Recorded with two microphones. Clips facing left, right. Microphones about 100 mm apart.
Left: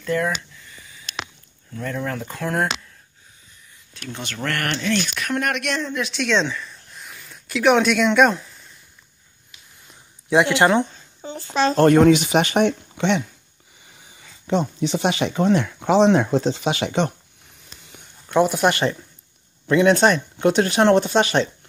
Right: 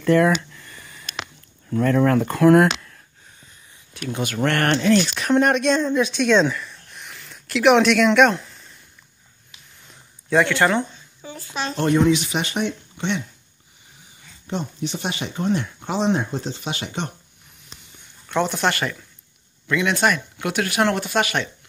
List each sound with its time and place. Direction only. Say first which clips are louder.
0.0 s a sound: right 6 dB; 65° right (ahead or behind)
1.8 s speech: right 10 dB; 70° right (ahead or behind)
4.0 s speech: right 6 dB; 10° right (ahead or behind)
4.4 s speech: right 5 dB; 25° right (ahead or behind); by 8.5 s centre (ahead or behind)
10.3 s speech: left 2 dB; 20° left (ahead or behind)
11.4 s speech: left 9 dB; 35° left (ahead or behind)
11.8 s speech: left 4 dB; 55° left (ahead or behind); by 13.2 s 85° left
14.5 s speech: left 6 dB; 90° left
18.3 s speech: left 4 dB; 10° left (ahead or behind)
19.7 s speech: left 5 dB; 35° left (ahead or behind)